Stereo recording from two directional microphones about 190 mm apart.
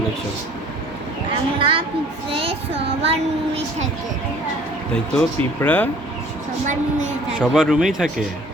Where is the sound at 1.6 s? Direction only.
25° right (ahead or behind).